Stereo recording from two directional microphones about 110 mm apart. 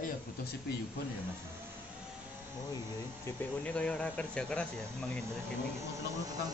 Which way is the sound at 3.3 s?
25° left (ahead or behind).